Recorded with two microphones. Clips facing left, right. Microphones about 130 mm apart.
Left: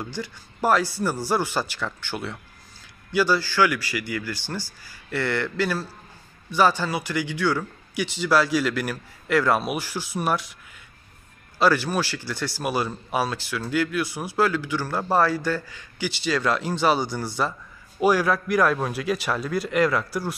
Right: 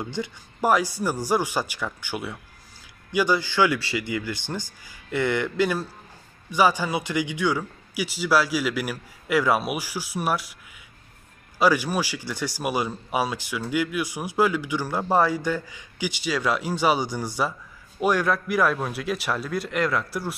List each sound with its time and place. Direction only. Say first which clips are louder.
0.0 s a man's voice: right 2 dB; 20° right (ahead or behind)
11.5 s a man's voice: even; 15° right (ahead or behind)
18.0 s a man's voice: left 2 dB; 5° left (ahead or behind)